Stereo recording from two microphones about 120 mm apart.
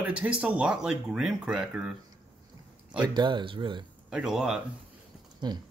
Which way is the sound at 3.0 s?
40° right (ahead or behind).